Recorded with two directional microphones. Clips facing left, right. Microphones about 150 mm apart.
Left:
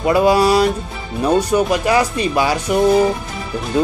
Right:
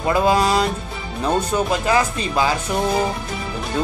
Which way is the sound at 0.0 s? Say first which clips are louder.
Left 4 dB; 10° left (ahead or behind).